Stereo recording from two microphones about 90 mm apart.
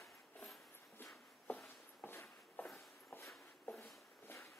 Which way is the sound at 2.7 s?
25° left (ahead or behind).